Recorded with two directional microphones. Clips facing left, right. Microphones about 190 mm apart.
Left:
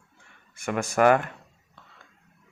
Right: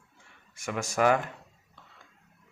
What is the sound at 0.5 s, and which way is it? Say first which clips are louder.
Speech: left 5 dB; 55° left (ahead or behind).